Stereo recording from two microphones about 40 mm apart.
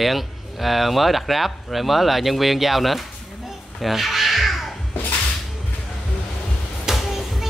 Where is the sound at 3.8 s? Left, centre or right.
Centre.